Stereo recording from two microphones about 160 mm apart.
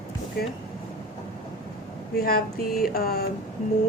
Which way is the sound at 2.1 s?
70° left (ahead or behind).